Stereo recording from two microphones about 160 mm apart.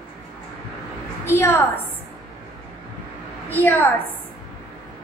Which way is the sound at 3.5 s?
10° left (ahead or behind).